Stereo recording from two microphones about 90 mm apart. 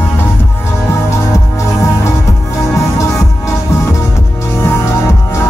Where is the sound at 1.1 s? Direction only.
35° left (ahead or behind).